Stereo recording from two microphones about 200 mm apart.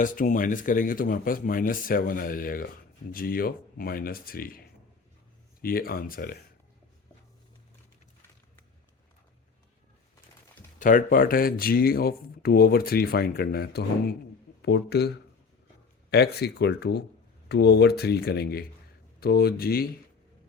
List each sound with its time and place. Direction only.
0.0 s speech: 40° left (ahead or behind)
5.6 s speech: 45° left (ahead or behind)
10.8 s speech: 40° left (ahead or behind)